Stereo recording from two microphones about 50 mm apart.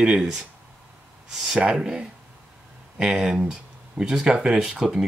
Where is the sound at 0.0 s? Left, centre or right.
Centre.